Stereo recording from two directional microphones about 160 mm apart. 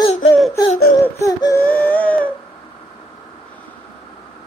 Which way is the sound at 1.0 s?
20° left (ahead or behind).